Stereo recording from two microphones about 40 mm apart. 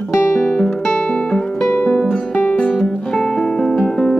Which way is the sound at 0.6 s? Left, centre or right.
Left.